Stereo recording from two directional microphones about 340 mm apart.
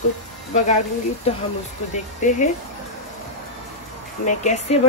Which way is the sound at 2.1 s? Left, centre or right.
Left.